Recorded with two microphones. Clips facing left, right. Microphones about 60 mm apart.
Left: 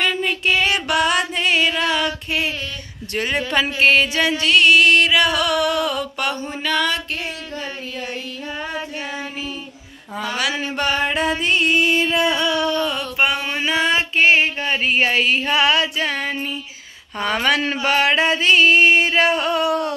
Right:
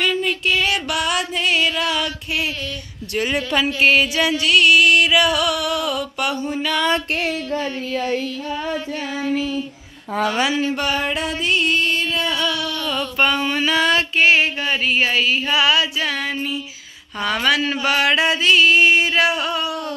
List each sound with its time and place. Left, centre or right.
0.0 s music: centre
3.1 s music: centre
3.5 s mantra: centre
10.5 s music: centre; by 13.0 s left
13.2 s a sound: centre; by 15.0 s left
15.0 s a woman's voice: left
16.1 s a sound: left
17.2 s music: left